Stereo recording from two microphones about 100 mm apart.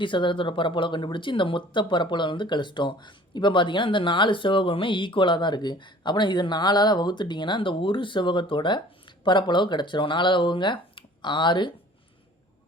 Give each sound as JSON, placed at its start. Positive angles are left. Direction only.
{"t": 0.0, "sound": "speech", "side_deg": 55}